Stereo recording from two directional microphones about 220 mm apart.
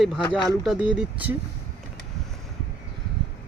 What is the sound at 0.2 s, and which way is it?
Speech, 20° left (ahead or behind).